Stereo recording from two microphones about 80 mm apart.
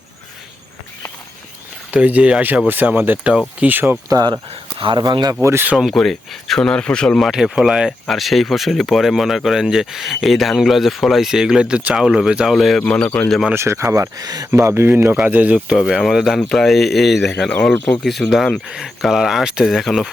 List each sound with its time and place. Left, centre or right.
1.9 s speech: centre
4.1 s speech: right
4.8 s speech: right
5.3 s speech: right
5.9 s speech: centre
7.3 s speech: centre
11.9 s speech: centre
12.8 s speech: centre
13.5 s speech: right
14.5 s speech: right; by 15.7 s centre
15.7 s speech: centre
16.4 s speech: centre
17.5 s speech: centre
18.0 s speech: centre